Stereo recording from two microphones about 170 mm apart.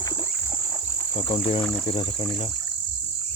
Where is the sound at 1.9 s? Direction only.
30° left (ahead or behind).